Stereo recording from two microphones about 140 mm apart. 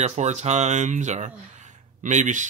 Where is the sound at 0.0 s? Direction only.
55° right (ahead or behind).